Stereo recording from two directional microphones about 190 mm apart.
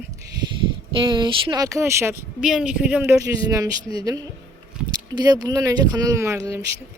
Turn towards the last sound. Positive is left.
turn(degrees=-15)  # may be behind; listen again after turning